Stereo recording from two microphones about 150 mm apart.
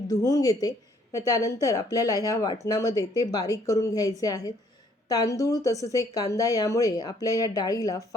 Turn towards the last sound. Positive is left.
turn(degrees=25)  # may be behind; listen again after turning